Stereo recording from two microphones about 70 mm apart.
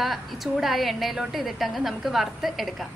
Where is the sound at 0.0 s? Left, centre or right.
Centre.